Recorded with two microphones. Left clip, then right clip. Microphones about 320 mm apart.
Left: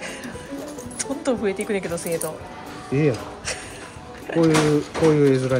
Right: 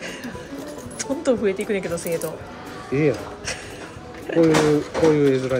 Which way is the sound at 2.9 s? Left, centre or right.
Left.